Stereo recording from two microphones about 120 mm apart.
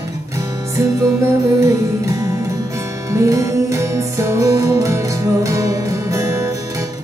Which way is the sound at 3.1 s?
25° right (ahead or behind).